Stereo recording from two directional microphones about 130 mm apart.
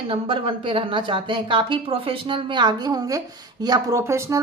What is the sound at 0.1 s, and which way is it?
A woman's voice, 45° right (ahead or behind).